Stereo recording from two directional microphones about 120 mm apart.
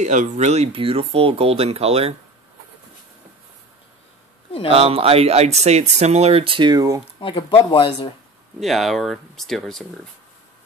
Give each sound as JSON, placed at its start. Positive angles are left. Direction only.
{"t": 0.0, "sound": "speech", "side_deg": -85}
{"t": 0.7, "sound": "speech", "side_deg": -50}
{"t": 4.6, "sound": "speech", "side_deg": -50}
{"t": 7.2, "sound": "speech", "side_deg": 45}
{"t": 8.5, "sound": "speech", "side_deg": 0}